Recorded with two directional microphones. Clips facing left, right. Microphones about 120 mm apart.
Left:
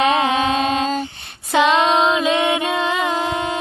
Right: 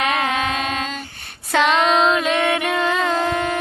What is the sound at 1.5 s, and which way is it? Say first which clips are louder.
Music: left 2 dB; 25° left (ahead or behind).